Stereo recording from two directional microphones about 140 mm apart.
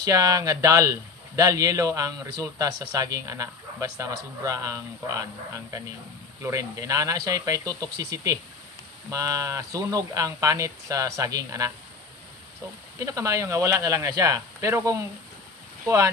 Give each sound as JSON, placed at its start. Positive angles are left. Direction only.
{"t": 0.0, "sound": "a man's voice", "side_deg": -25}
{"t": 13.0, "sound": "a man's voice", "side_deg": -20}